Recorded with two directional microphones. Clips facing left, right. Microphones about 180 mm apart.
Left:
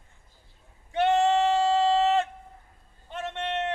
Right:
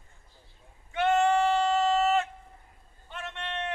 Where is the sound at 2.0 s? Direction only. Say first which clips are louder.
Left 2 dB; 35° left (ahead or behind).